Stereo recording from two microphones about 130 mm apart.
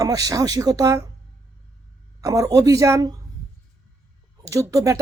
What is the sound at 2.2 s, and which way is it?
Speech, 25° right (ahead or behind).